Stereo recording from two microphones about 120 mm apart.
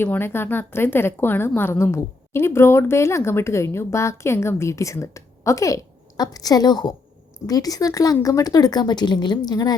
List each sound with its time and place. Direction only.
0.0 s a woman's voice: 20° left (ahead or behind)